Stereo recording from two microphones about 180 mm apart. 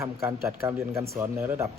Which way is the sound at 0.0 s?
15° right (ahead or behind).